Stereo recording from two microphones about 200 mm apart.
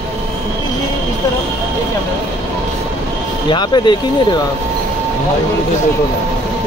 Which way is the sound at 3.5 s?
20° left (ahead or behind).